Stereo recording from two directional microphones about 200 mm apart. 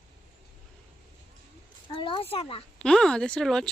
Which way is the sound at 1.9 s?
25° left (ahead or behind).